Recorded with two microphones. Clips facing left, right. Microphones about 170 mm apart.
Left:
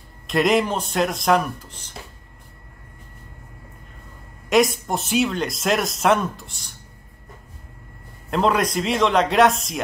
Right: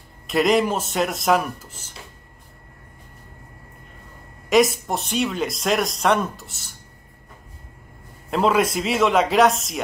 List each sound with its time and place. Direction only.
0.3 s speech: centre (ahead or behind)
4.5 s speech: centre (ahead or behind)
8.3 s speech: 5° right (ahead or behind)